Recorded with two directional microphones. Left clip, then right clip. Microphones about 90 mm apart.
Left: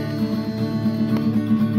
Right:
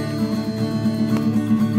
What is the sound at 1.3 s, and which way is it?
Music, 40° right (ahead or behind).